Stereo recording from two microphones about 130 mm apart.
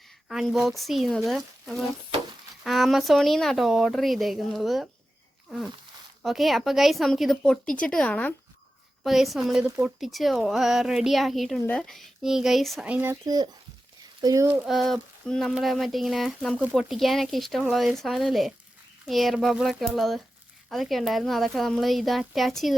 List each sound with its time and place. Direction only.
0.3 s speech: 5° right (ahead or behind)
5.5 s a sound: centre (ahead or behind)
6.2 s speech: centre (ahead or behind)
9.0 s speech: centre (ahead or behind)
9.6 s speech: 15° right (ahead or behind)
10.0 s speech: centre (ahead or behind)
12.8 s speech: 15° right (ahead or behind)
13.2 s speech: 30° right (ahead or behind)
14.4 s speech: 15° right (ahead or behind)
14.7 s speech: centre (ahead or behind)